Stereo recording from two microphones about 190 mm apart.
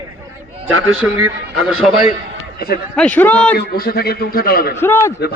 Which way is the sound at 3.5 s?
50° left (ahead or behind).